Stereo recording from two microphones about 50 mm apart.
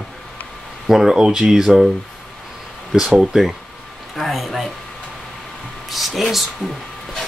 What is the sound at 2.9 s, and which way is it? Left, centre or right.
Speech, centre.